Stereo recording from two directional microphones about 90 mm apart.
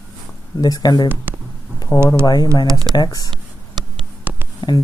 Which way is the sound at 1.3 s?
25° right (ahead or behind).